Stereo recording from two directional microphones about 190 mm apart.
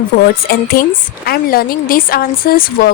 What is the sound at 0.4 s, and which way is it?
A woman's voice, 50° left (ahead or behind).